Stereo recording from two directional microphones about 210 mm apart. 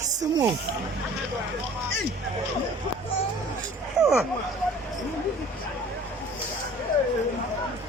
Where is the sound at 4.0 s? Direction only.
5° right (ahead or behind).